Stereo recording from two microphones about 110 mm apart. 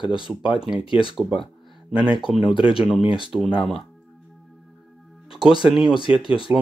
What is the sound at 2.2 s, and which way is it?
Speech, 5° right (ahead or behind).